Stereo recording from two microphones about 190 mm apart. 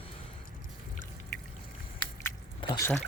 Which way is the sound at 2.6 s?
20° left (ahead or behind).